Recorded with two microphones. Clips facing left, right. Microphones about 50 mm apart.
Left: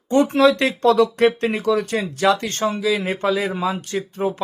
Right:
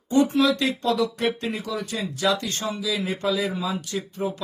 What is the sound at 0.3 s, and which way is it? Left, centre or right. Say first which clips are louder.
Speech: left 5 dB; left.